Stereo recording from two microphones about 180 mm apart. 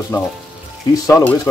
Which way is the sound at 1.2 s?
15° left (ahead or behind).